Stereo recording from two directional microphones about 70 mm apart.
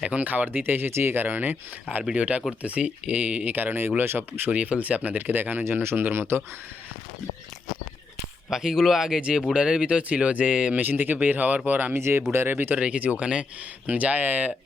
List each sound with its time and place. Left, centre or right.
0.0 s speech: centre; by 6.4 s right
8.4 s speech: centre; by 12.8 s right
12.8 s speech: centre